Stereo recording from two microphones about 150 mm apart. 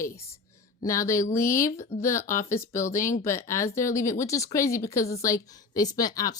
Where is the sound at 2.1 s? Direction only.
60° left (ahead or behind).